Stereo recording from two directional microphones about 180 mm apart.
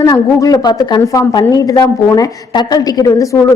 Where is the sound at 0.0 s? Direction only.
20° left (ahead or behind).